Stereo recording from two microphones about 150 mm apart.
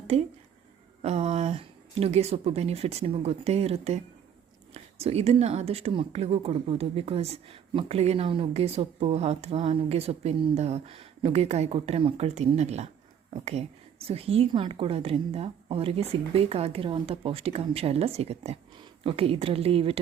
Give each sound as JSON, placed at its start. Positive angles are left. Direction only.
{"t": 0.1, "sound": "a woman's voice", "side_deg": -45}